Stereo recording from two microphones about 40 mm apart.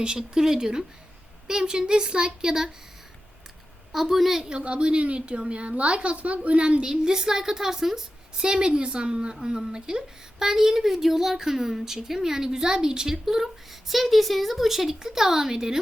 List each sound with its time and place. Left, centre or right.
0.0 s a woman's voice: centre
3.9 s a woman's voice: centre
4.6 s a woman's voice: right
6.8 s a woman's voice: centre